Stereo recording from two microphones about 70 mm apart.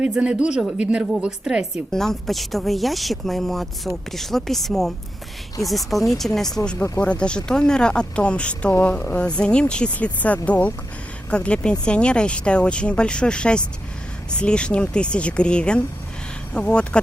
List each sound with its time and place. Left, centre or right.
0.0 s a woman's voice: centre
1.9 s speech: centre
7.0 s speech: centre